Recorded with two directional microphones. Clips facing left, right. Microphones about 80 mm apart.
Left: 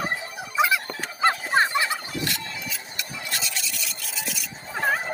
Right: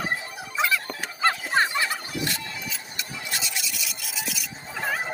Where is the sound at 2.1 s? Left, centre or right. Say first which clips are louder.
Even; right.